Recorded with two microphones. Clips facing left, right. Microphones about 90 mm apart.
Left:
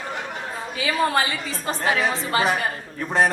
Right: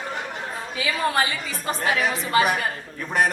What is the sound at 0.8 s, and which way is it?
A woman's voice, 30° left (ahead or behind).